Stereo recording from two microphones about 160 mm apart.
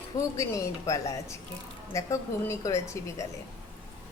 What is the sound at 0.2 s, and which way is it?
A woman's voice, 20° left (ahead or behind).